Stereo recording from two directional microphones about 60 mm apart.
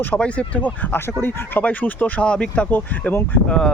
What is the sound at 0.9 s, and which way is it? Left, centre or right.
Speech, left.